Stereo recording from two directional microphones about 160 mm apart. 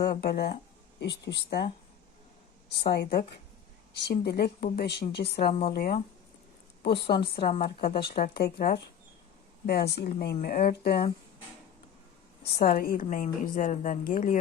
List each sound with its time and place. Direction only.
0.1 s speech: 80° left
0.9 s speech: 90° left
2.7 s speech: 90° left
5.7 s a woman's voice: 65° left (ahead or behind)
6.8 s a woman's voice: 35° left (ahead or behind)
7.6 s a woman's voice: 65° left (ahead or behind)
10.4 s speech: 65° left (ahead or behind)
12.4 s a woman's voice: 75° left (ahead or behind); by 14.3 s 55° left (ahead or behind)